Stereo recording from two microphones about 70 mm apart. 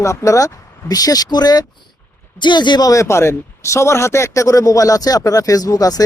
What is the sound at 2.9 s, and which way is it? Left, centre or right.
Speech, left.